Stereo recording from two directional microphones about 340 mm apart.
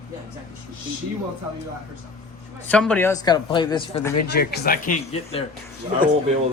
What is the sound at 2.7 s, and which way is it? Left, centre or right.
A man's voice, centre.